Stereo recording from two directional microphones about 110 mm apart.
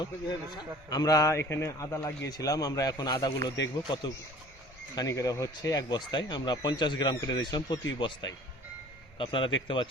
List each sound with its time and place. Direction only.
0.0 s a man's voice: 40° left (ahead or behind)
4.9 s a man's voice: 30° left (ahead or behind)
9.1 s a man's voice: 50° left (ahead or behind)